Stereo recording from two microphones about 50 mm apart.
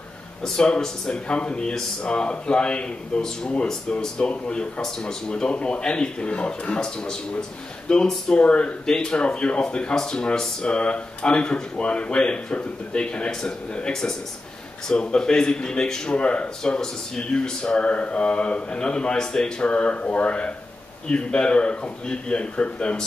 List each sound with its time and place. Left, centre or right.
0.4 s speech: centre
10.7 s speech: left